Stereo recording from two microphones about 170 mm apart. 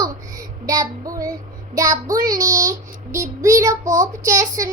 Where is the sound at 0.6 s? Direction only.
20° right (ahead or behind).